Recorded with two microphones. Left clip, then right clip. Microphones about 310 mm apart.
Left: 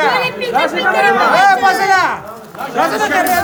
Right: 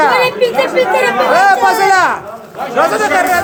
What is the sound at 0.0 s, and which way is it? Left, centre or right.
Speech, centre.